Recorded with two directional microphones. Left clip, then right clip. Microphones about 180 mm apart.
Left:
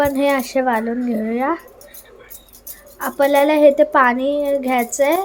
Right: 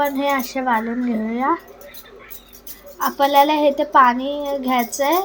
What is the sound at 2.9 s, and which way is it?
Speech, 25° left (ahead or behind).